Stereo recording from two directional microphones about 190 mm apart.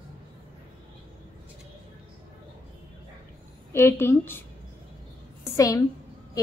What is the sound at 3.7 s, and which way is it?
Speech, 10° left (ahead or behind).